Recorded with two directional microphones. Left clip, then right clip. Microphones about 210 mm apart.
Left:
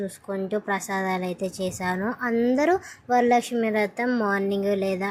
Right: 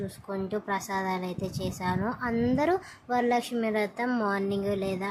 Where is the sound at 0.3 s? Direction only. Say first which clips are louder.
Left 4 dB; 15° left (ahead or behind).